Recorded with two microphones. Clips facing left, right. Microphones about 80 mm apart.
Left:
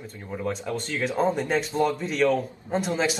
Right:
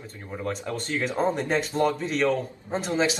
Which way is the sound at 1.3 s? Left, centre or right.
Centre.